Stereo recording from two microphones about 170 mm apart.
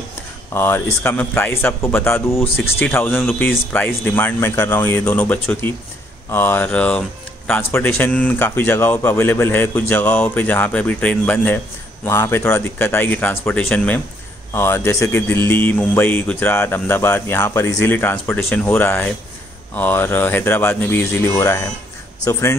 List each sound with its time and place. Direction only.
0.6 s speech: 15° left (ahead or behind)